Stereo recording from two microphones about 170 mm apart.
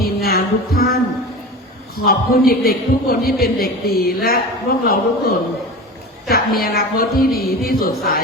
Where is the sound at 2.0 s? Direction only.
65° left (ahead or behind).